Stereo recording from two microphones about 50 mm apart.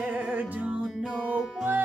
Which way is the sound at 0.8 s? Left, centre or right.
Centre.